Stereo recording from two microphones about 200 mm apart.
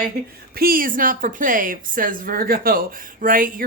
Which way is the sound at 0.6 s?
45° right (ahead or behind).